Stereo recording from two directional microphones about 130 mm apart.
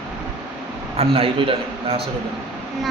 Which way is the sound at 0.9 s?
45° right (ahead or behind).